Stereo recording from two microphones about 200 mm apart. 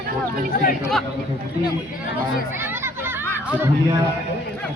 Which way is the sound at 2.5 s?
10° right (ahead or behind).